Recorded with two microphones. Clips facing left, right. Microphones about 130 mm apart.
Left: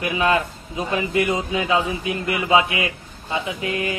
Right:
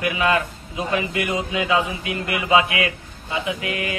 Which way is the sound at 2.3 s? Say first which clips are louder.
Even; 25° left (ahead or behind).